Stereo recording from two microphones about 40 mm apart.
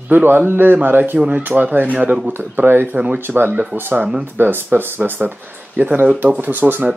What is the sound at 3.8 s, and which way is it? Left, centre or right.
Speech, right.